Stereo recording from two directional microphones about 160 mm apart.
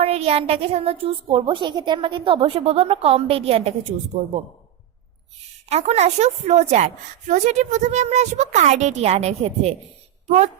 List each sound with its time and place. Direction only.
0.0 s a woman's voice: 40° right (ahead or behind)
5.6 s a woman's voice: 40° right (ahead or behind)